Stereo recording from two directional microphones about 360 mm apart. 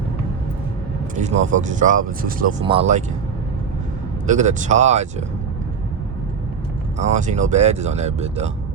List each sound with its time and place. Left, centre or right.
1.2 s speech: centre
4.3 s speech: centre
7.0 s speech: centre